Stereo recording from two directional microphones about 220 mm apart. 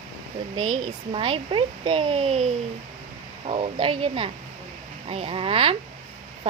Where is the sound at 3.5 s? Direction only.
25° right (ahead or behind).